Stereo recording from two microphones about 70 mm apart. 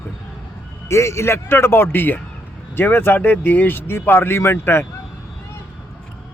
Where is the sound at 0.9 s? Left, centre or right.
Left.